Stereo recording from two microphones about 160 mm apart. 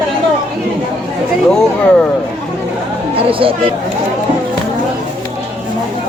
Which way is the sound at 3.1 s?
35° right (ahead or behind).